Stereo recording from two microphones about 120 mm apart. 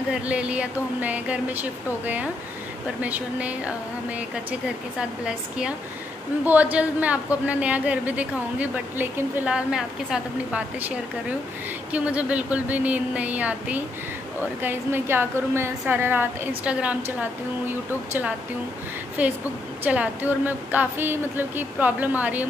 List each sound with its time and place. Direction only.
0.1 s speech: 10° right (ahead or behind)
6.4 s speech: 15° right (ahead or behind)
11.9 s speech: 10° right (ahead or behind)